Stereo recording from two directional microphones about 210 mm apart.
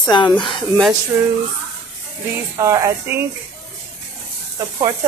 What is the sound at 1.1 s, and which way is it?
Speech, 10° right (ahead or behind).